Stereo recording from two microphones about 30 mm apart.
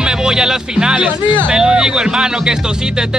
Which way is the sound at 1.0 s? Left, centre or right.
Right.